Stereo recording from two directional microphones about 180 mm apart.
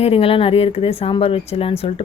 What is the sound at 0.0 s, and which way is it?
Speech, 30° left (ahead or behind).